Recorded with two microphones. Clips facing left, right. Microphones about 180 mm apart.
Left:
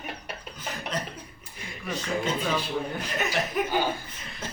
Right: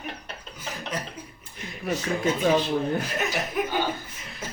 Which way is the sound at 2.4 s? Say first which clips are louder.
Right 6 dB; 50° right (ahead or behind).